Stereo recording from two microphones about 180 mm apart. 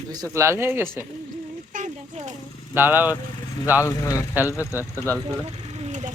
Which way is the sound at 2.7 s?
10° right (ahead or behind).